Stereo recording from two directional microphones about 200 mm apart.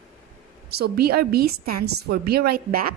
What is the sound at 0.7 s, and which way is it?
A woman's voice, 50° right (ahead or behind).